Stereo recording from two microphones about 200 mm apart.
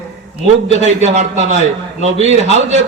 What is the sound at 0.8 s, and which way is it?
A man's voice, 35° right (ahead or behind).